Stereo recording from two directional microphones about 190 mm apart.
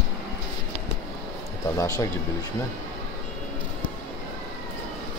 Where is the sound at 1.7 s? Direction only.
20° left (ahead or behind).